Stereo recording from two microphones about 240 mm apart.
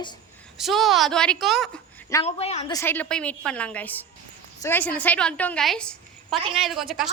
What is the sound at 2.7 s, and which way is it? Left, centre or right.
A woman's voice, centre.